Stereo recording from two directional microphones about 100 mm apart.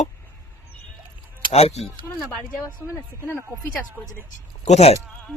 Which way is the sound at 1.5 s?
90° left.